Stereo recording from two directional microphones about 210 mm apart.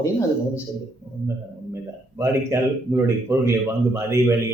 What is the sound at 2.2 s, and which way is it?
Speech, 10° right (ahead or behind).